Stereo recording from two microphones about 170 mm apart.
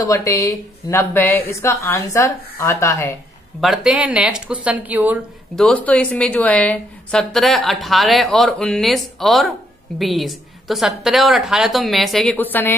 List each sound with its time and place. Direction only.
0.0 s a woman's voice: 20° left (ahead or behind)
3.6 s a woman's voice: centre (ahead or behind)
5.6 s a woman's voice: 10° left (ahead or behind)